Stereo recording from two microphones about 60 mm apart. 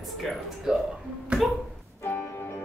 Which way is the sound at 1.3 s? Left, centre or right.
Centre.